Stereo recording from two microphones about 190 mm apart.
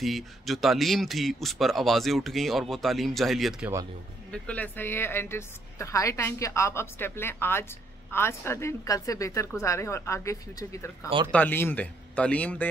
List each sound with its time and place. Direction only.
0.0 s a man's voice: centre (ahead or behind)